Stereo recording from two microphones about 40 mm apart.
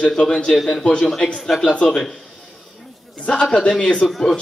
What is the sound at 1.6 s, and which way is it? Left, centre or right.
Speech, left.